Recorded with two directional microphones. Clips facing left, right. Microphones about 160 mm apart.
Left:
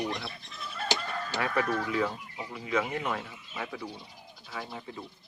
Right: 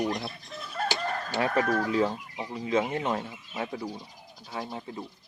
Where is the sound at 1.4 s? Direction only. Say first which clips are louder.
Right 4 dB; 35° right (ahead or behind).